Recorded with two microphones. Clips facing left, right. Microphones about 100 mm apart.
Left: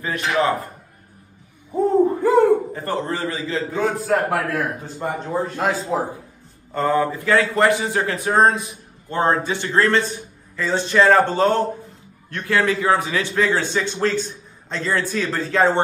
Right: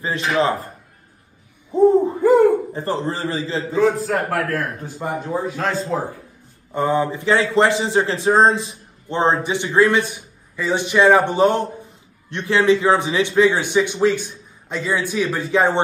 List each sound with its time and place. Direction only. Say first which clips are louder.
0.0 s a man's voice: right 1 dB; 30° right (ahead or behind)
1.9 s hoot: right 1 dB; 15° right (ahead or behind)
2.7 s a man's voice: right 1 dB; 30° right (ahead or behind)
3.7 s a man's voice: right 3 dB; centre (ahead or behind)
5.9 s a man's voice: left 1 dB; 20° left (ahead or behind)
6.7 s a man's voice: even; 20° right (ahead or behind)